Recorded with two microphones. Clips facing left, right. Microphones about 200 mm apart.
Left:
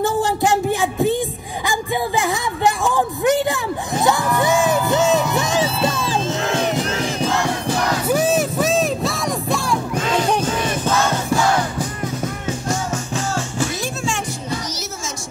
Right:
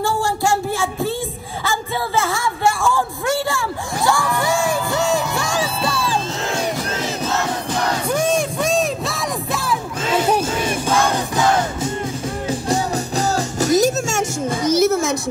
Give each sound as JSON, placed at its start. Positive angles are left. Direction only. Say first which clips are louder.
{"t": 0.0, "sound": "child singing", "louder": "left 2 dB", "side_deg": 20}
{"t": 1.7, "sound": "a sound", "louder": "left 2 dB", "side_deg": 15}
{"t": 8.1, "sound": "music", "louder": "left 2 dB", "side_deg": 5}
{"t": 12.6, "sound": "music", "louder": "right 3 dB", "side_deg": -35}